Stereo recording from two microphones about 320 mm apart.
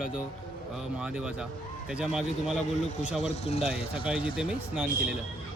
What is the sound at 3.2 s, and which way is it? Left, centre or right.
Speech, centre.